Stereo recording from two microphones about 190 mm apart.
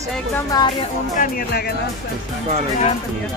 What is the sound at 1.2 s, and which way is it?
Speech, 50° left (ahead or behind).